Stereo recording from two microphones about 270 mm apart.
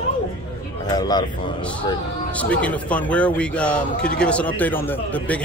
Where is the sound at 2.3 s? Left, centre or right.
Centre.